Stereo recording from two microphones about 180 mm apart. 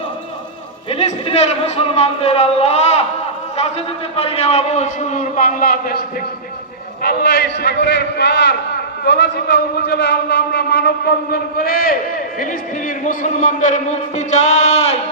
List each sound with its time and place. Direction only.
0.9 s a man's voice: 35° left (ahead or behind); by 11.9 s 55° left (ahead or behind)
13.1 s a man's voice: 45° left (ahead or behind)